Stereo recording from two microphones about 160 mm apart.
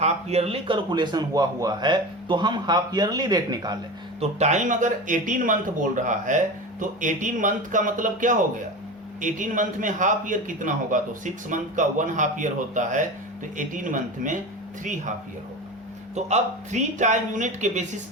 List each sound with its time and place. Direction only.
0.0 s a man's voice: 40° right (ahead or behind); by 3.8 s 25° right (ahead or behind)
4.2 s speech: 45° right (ahead or behind)
16.1 s speech: 45° right (ahead or behind)